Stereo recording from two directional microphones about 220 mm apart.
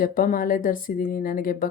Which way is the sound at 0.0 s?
40° left (ahead or behind).